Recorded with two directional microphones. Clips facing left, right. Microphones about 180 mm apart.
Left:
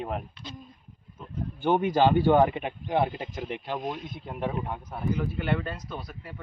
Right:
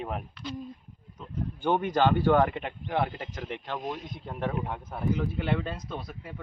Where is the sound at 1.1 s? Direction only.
10° left (ahead or behind).